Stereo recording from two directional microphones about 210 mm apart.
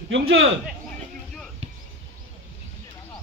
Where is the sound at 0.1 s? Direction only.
65° right (ahead or behind).